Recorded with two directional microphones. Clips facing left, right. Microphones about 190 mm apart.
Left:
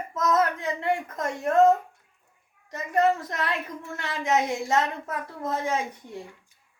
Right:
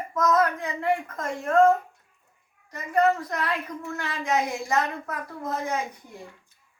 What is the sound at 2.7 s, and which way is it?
Speech, 25° left (ahead or behind).